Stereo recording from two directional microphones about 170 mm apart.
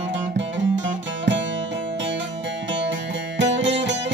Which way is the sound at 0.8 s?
90° right.